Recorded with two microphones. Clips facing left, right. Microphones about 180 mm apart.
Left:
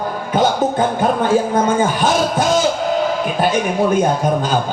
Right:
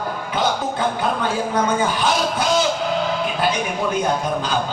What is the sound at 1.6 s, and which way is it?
Speech, 45° left (ahead or behind).